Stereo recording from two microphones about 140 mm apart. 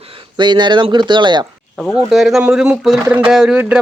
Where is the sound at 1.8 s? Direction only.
Centre (ahead or behind).